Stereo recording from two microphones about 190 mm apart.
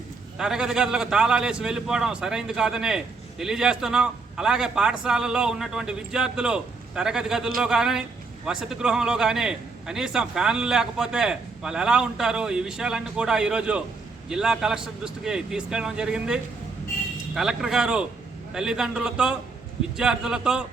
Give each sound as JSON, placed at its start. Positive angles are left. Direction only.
{"t": 0.3, "sound": "a man's voice", "side_deg": -5}